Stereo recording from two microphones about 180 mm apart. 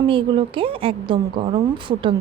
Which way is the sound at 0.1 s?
30° right (ahead or behind).